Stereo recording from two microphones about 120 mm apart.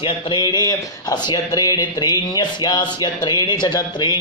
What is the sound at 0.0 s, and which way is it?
Speech, 40° left (ahead or behind).